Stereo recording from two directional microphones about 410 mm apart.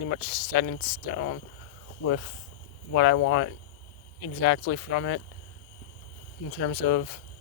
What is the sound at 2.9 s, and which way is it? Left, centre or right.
Speech, left.